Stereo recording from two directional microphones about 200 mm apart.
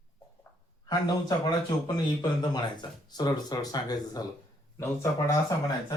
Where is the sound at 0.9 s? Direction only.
20° left (ahead or behind).